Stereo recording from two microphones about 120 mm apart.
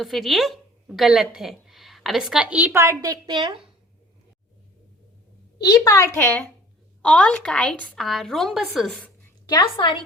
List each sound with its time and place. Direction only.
0.0 s a woman's voice: centre (ahead or behind); by 3.4 s 30° right (ahead or behind)
5.5 s a woman's voice: 35° left (ahead or behind)
6.1 s a woman's voice: 15° left (ahead or behind)
9.5 s a woman's voice: 40° left (ahead or behind)